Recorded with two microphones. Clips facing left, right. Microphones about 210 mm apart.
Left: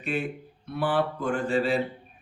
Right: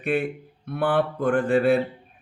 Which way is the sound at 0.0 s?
60° right (ahead or behind).